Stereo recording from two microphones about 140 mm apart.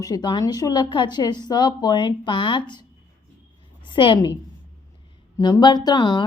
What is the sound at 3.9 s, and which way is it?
Speech, 35° left (ahead or behind).